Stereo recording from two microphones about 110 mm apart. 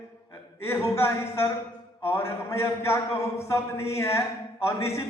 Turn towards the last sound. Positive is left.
turn(degrees=25)  # may be behind; listen again after turning